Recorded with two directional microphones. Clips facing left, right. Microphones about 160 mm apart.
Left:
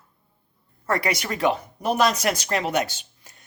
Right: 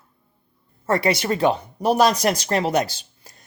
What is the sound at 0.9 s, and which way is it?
Speech, 30° right (ahead or behind).